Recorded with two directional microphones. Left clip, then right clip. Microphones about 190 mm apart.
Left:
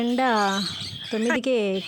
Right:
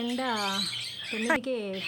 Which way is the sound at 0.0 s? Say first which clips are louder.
Left 8 dB; 40° left (ahead or behind).